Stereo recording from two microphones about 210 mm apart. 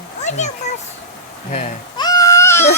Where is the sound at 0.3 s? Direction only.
35° left (ahead or behind).